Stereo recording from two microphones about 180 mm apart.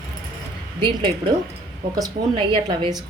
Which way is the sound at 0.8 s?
25° right (ahead or behind).